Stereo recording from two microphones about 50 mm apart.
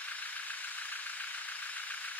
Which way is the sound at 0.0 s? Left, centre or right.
Left.